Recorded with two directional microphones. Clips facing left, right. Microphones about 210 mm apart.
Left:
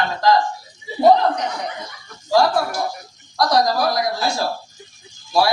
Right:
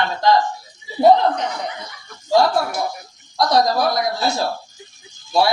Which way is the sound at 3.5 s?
25° right (ahead or behind).